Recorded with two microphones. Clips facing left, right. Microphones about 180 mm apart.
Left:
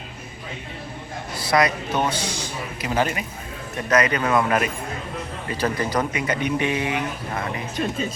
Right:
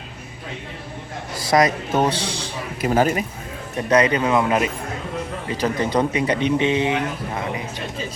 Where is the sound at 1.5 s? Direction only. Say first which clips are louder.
Right 3 dB; 45° right (ahead or behind).